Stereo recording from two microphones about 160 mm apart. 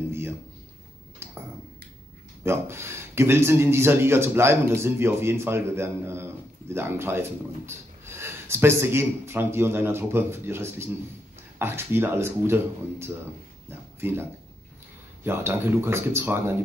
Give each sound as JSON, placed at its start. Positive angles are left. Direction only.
{"t": 2.4, "sound": "speech", "side_deg": -15}
{"t": 13.7, "sound": "a sound", "side_deg": -15}
{"t": 15.2, "sound": "speech", "side_deg": -15}